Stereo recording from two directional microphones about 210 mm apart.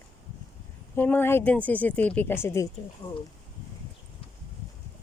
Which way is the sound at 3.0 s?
20° left (ahead or behind).